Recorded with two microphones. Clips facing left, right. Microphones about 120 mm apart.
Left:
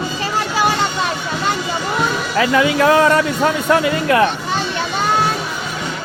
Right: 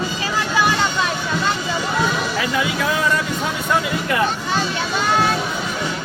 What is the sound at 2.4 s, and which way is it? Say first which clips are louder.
Speech: left 7 dB; 60° left (ahead or behind).